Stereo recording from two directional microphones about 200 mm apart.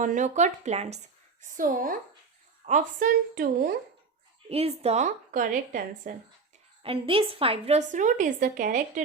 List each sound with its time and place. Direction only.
0.0 s a woman's voice: 40° right (ahead or behind)
4.4 s a woman's voice: 30° right (ahead or behind)
6.8 s a woman's voice: 30° right (ahead or behind)